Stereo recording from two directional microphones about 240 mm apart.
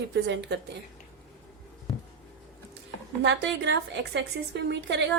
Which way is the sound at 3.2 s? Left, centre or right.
Right.